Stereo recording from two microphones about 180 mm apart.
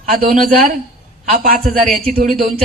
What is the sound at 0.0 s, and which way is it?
A man's voice, 50° right (ahead or behind).